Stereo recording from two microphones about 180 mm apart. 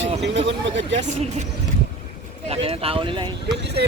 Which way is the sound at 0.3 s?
90° right.